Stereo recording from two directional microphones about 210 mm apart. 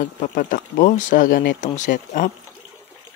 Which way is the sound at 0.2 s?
40° left (ahead or behind).